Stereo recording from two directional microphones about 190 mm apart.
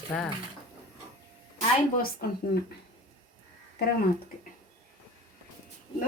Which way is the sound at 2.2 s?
55° left (ahead or behind).